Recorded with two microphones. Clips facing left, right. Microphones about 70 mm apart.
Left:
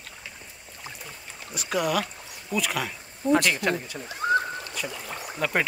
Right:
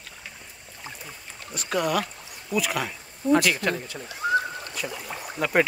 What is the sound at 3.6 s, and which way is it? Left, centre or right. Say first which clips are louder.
Speech: left 1 dB; centre.